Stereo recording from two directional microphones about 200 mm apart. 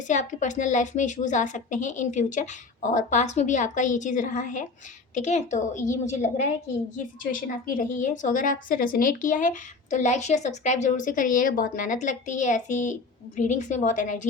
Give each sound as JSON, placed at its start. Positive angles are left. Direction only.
{"t": 0.1, "sound": "a woman's voice", "side_deg": 40}